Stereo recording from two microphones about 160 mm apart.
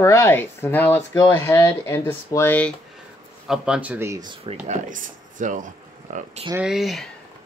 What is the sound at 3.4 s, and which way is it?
Speech, 5° right (ahead or behind).